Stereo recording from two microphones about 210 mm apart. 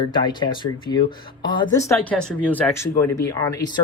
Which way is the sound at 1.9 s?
5° left (ahead or behind).